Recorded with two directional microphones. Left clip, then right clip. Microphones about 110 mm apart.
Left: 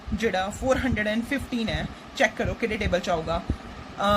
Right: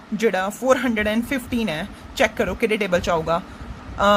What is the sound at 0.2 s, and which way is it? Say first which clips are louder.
A man's voice: right 5 dB; 55° right (ahead or behind).